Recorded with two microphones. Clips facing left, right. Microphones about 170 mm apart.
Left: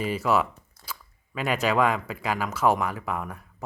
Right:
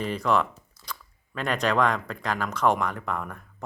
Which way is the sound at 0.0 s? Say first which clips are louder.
Even; 5° left (ahead or behind).